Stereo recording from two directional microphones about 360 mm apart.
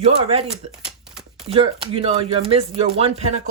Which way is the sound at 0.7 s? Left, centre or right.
Centre.